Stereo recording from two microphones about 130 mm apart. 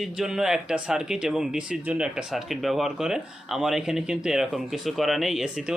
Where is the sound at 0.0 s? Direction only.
5° right (ahead or behind).